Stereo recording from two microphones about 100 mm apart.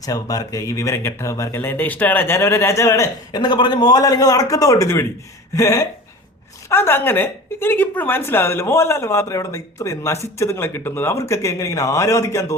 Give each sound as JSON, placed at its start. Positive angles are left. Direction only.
{"t": 0.0, "sound": "speech", "side_deg": 35}
{"t": 3.3, "sound": "a man's voice", "side_deg": 50}